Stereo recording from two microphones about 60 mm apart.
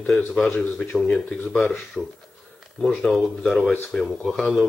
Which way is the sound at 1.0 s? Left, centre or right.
Centre.